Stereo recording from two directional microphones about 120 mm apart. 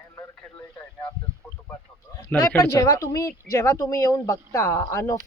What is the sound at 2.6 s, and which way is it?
Speech, 25° left (ahead or behind).